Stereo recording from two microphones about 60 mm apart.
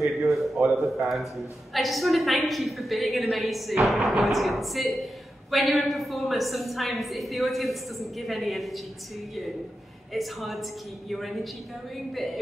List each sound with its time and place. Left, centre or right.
0.0 s a sound: centre
1.0 s a woman's voice: centre
10.1 s a woman's voice: centre